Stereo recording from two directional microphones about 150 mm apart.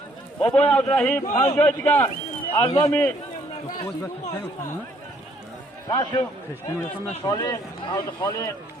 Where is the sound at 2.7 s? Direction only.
40° left (ahead or behind).